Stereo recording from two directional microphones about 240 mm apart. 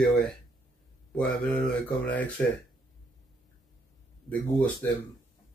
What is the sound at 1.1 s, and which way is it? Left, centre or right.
Speech, centre.